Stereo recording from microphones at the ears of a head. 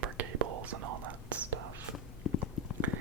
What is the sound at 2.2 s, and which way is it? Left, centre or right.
Clip-clop, left.